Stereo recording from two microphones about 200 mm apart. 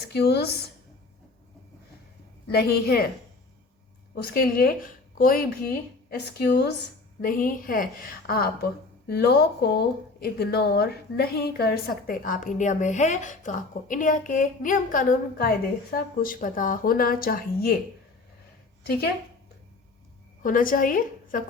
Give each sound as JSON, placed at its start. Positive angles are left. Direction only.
{"t": 0.0, "sound": "speech", "side_deg": 55}
{"t": 2.5, "sound": "speech", "side_deg": 50}
{"t": 4.1, "sound": "speech", "side_deg": 50}
{"t": 18.8, "sound": "speech", "side_deg": 50}
{"t": 20.4, "sound": "a woman's voice", "side_deg": 45}